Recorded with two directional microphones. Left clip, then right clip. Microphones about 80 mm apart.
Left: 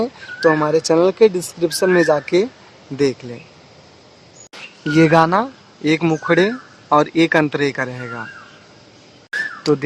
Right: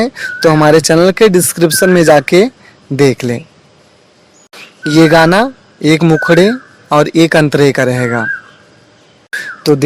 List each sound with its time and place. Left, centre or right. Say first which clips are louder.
0.0 s speech: right 6 dB; right
4.8 s speech: right 6 dB; right
6.0 s speech: right 8 dB; centre
6.2 s speech: right 7 dB; right
9.6 s speech: right 7 dB; right